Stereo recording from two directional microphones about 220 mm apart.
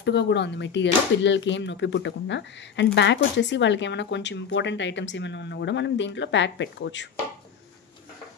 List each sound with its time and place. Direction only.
0.0 s speech: 50° left (ahead or behind)